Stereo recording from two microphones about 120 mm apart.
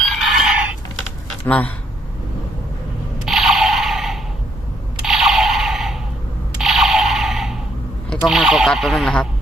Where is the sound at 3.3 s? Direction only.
Centre (ahead or behind).